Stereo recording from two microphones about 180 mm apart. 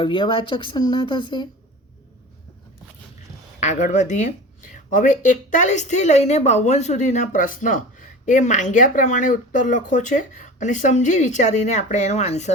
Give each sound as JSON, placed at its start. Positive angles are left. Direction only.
{"t": 0.0, "sound": "speech", "side_deg": 25}
{"t": 3.6, "sound": "a woman's voice", "side_deg": 40}